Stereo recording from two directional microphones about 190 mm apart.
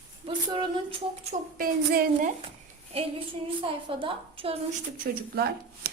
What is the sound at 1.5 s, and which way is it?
Speech, 50° right (ahead or behind).